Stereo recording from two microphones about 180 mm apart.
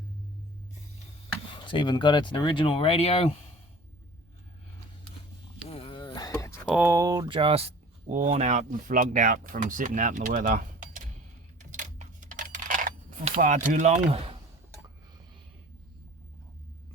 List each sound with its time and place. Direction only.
1.6 s speech: 25° left (ahead or behind)
5.6 s a sound: 30° left (ahead or behind)
6.7 s speech: 15° right (ahead or behind); by 11.1 s 45° right (ahead or behind)
11.7 s coin: 45° right (ahead or behind)
13.4 s speech: 45° right (ahead or behind)